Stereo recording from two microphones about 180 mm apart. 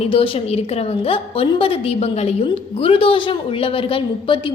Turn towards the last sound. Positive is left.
turn(degrees=30)  # may be behind; listen again after turning